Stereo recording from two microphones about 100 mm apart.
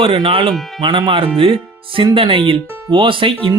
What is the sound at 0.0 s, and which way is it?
Speech, 55° right (ahead or behind).